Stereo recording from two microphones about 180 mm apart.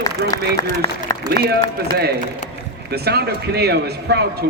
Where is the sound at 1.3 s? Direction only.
65° right (ahead or behind).